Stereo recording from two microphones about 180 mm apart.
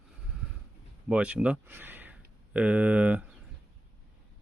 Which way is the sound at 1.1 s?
5° right (ahead or behind).